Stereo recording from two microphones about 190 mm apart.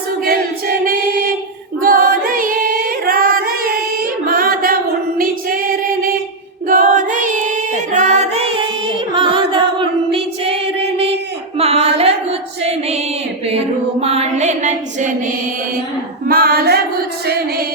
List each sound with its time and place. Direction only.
0.3 s choir: 50° right (ahead or behind)
1.8 s singing: 50° right (ahead or behind)
4.3 s music: 50° right (ahead or behind)
6.7 s singing: 45° right (ahead or behind)
7.9 s music: 35° right (ahead or behind)
9.1 s singing: 25° right (ahead or behind)
11.5 s a sound: 30° right (ahead or behind)
14.0 s a sound: 35° right (ahead or behind)
16.2 s female singing: 50° right (ahead or behind)